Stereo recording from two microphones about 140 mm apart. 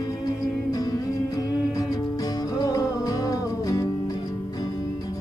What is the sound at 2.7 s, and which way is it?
Music, 25° left (ahead or behind).